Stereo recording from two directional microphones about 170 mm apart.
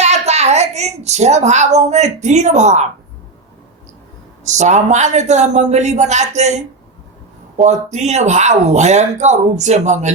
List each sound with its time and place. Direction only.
0.0 s a woman's voice: 40° right (ahead or behind)
4.4 s speech: 45° right (ahead or behind)